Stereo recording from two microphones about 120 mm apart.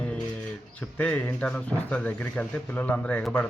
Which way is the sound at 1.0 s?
10° left (ahead or behind).